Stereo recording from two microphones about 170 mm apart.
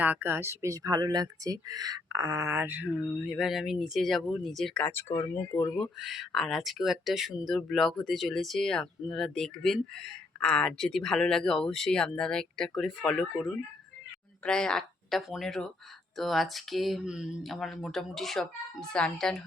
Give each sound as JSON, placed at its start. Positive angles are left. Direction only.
{"t": 0.0, "sound": "speech", "side_deg": -10}
{"t": 5.7, "sound": "speech", "side_deg": 0}